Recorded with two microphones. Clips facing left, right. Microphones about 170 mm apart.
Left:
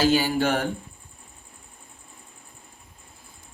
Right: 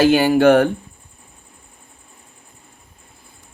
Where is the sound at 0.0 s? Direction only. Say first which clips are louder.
Right 9 dB; 65° right (ahead or behind).